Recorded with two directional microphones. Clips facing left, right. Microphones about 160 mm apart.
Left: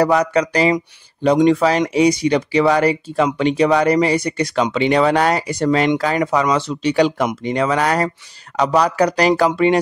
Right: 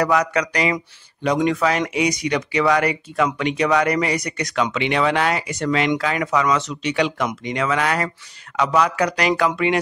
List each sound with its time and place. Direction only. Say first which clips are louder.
0.0 s speech: left 4 dB; 30° left (ahead or behind)